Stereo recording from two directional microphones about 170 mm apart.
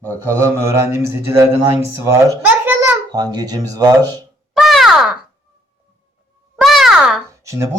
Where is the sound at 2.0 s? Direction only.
15° right (ahead or behind).